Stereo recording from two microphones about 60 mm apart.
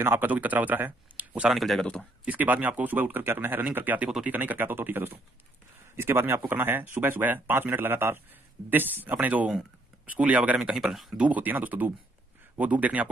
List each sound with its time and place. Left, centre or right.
0.0 s speech: right
1.5 s speech: centre
2.2 s speech: right
10.6 s speech: centre
11.1 s speech: right